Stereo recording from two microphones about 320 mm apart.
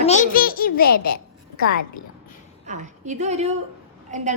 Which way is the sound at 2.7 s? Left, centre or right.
Right.